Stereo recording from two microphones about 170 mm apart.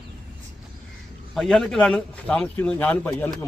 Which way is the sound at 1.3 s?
Centre (ahead or behind).